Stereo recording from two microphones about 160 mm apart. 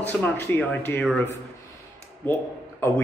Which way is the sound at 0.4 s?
15° left (ahead or behind).